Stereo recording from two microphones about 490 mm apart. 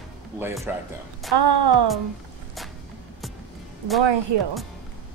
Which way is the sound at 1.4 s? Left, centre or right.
Right.